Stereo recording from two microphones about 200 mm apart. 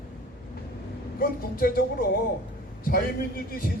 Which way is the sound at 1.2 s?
50° left (ahead or behind).